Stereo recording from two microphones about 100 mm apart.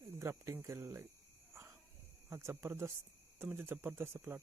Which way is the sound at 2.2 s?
25° right (ahead or behind).